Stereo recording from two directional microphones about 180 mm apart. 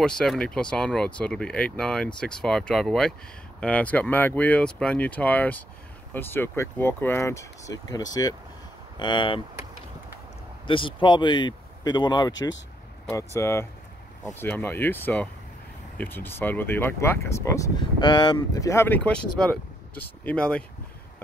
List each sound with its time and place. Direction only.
0.0 s speech: 5° left (ahead or behind); by 9.4 s 25° left (ahead or behind)
10.7 s speech: 30° left (ahead or behind); by 20.6 s 5° left (ahead or behind)